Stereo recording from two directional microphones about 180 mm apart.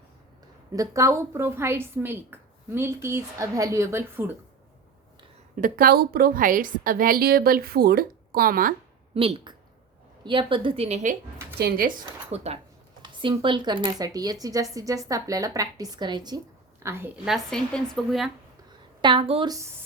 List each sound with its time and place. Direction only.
0.7 s a woman's voice: 20° right (ahead or behind)
5.5 s a woman's voice: 50° right (ahead or behind)
9.1 s a woman's voice: 30° right (ahead or behind)
11.5 s a woman's voice: 55° right (ahead or behind)
12.3 s a woman's voice: 35° right (ahead or behind)
16.8 s a woman's voice: 10° right (ahead or behind)
17.2 s a woman's voice: centre (ahead or behind)
19.0 s speech: 30° right (ahead or behind)